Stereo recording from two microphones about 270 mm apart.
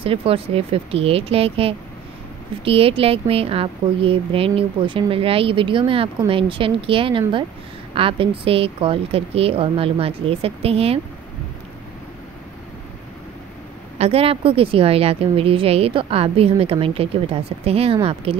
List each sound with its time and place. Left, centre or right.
0.0 s speech: right
13.9 s speech: right